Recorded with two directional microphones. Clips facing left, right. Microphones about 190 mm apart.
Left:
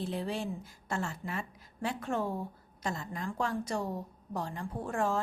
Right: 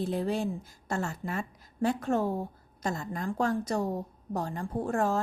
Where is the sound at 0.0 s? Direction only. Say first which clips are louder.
Right 5 dB; 45° right (ahead or behind).